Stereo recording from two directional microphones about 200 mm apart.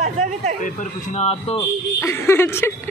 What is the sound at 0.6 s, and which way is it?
Speech, 40° left (ahead or behind).